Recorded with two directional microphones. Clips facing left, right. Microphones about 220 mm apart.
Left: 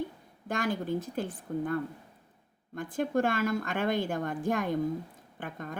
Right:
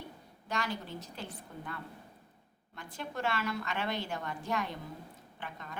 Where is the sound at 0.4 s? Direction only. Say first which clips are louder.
Left 7 dB; 50° left (ahead or behind).